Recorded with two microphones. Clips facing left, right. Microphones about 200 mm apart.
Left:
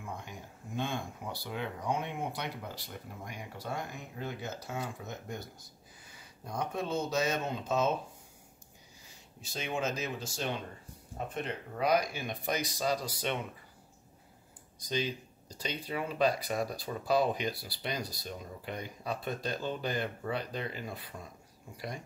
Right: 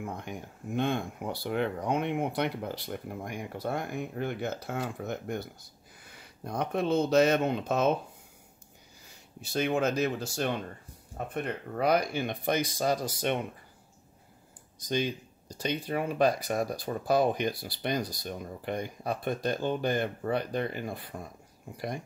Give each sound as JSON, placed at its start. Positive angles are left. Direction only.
{"t": 0.0, "sound": "speech", "side_deg": -60}
{"t": 9.4, "sound": "speech", "side_deg": -65}
{"t": 14.9, "sound": "speech", "side_deg": -50}